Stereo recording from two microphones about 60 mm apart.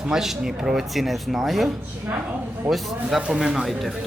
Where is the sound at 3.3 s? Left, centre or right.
Centre.